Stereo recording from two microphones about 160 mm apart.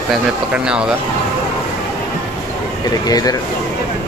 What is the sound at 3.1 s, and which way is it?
Speech, 25° left (ahead or behind).